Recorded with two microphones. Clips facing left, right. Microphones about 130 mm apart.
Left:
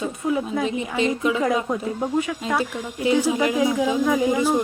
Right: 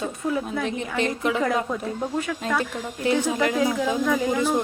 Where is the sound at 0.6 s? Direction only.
55° right (ahead or behind).